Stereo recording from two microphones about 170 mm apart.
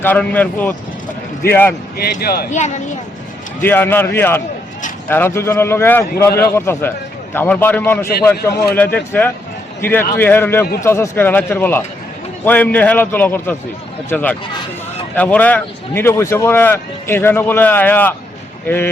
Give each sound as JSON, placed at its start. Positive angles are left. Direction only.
{"t": 0.0, "sound": "speech", "side_deg": 10}
{"t": 2.2, "sound": "speech", "side_deg": 65}
{"t": 2.5, "sound": "speech", "side_deg": 45}
{"t": 3.6, "sound": "speech", "side_deg": 10}